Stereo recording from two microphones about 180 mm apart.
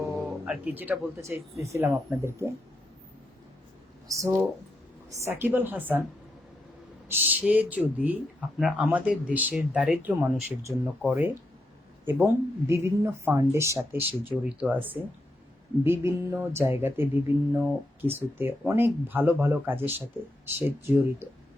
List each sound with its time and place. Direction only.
0.2 s speech: 5° right (ahead or behind)
4.1 s speech: 15° right (ahead or behind)
7.1 s speech: 10° right (ahead or behind)